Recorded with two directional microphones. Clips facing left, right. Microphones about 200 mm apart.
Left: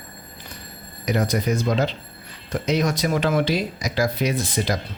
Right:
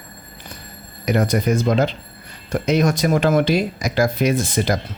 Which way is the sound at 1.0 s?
55° right (ahead or behind).